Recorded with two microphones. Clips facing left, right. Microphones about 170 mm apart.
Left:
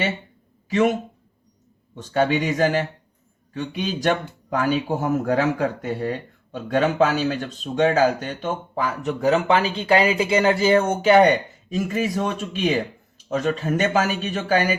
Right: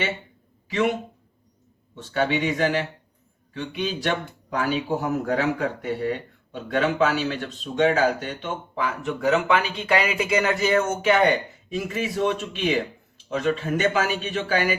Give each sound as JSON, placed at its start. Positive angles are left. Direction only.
{"t": 0.7, "sound": "speech", "side_deg": 45}
{"t": 2.0, "sound": "speech", "side_deg": 40}